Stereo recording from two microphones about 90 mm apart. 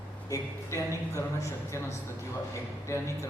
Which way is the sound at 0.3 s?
35° left (ahead or behind).